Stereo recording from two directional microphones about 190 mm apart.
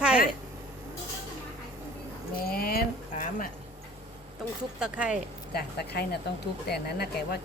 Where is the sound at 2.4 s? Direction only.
55° left (ahead or behind).